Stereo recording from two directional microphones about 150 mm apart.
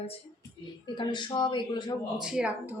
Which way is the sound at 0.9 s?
30° left (ahead or behind).